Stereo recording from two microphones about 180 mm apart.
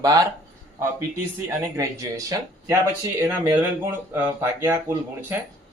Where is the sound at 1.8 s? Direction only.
15° right (ahead or behind).